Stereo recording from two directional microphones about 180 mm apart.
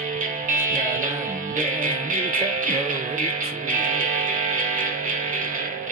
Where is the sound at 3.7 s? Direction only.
50° right (ahead or behind).